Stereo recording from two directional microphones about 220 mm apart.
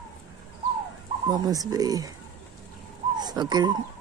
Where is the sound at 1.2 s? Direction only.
15° right (ahead or behind).